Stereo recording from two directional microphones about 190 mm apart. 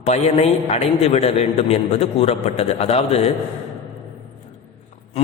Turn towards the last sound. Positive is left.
turn(degrees=30)  # may be behind; listen again after turning